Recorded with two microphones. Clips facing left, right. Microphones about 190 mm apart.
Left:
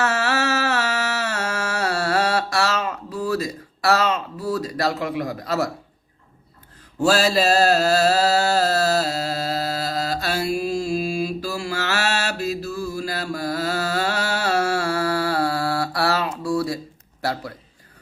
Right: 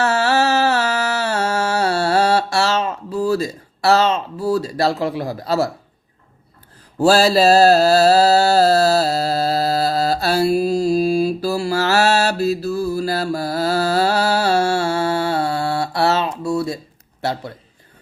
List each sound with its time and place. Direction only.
0.0 s music: 30° right (ahead or behind)
7.0 s mantra: 35° right (ahead or behind)